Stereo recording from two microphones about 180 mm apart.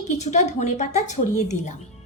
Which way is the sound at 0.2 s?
40° left (ahead or behind).